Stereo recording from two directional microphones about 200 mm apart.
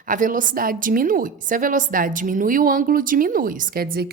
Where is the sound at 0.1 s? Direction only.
40° right (ahead or behind).